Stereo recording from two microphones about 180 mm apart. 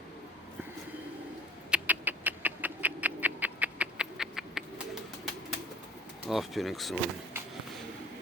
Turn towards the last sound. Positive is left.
turn(degrees=0)  # may be behind; listen again after turning